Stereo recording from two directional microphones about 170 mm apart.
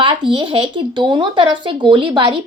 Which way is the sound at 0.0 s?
30° right (ahead or behind).